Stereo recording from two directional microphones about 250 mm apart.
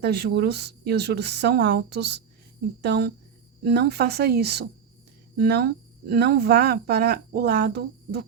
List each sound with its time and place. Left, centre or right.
0.0 s speech: right